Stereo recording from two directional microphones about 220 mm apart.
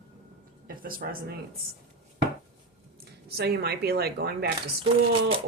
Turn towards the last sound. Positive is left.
turn(degrees=-25)  # may be behind; listen again after turning